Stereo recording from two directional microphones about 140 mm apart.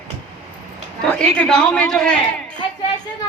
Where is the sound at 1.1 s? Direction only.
10° left (ahead or behind).